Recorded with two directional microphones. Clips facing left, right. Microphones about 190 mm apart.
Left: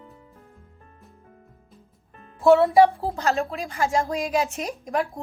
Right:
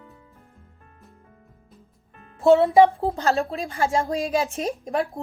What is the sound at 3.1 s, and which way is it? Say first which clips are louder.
Speech: right 1 dB; 30° right (ahead or behind).